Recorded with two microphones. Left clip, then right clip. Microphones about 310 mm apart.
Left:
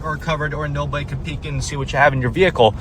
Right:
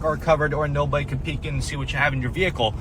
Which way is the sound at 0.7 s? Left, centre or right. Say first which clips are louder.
Right 1 dB; centre.